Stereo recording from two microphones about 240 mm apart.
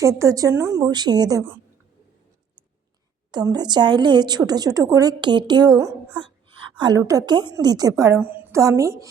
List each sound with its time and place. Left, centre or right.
0.0 s a woman's voice: centre
3.3 s a woman's voice: centre